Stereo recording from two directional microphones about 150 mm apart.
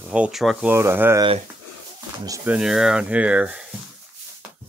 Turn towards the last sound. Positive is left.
turn(degrees=-10)  # may be behind; listen again after turning